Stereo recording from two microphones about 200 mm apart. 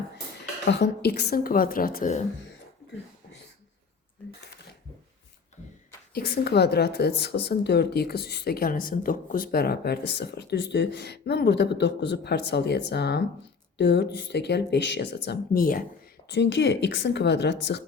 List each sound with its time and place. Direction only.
0.7 s a woman's voice: 55° left (ahead or behind)
6.1 s speech: 50° left (ahead or behind)
16.3 s speech: 60° left (ahead or behind)